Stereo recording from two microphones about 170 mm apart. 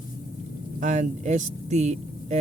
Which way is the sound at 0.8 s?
45° right (ahead or behind).